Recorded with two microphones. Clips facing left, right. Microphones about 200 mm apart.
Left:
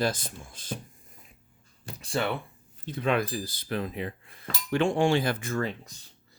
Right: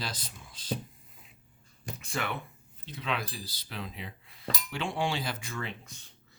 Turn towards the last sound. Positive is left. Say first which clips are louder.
# left 8 dB
turn(degrees=45)  # may be behind; listen again after turning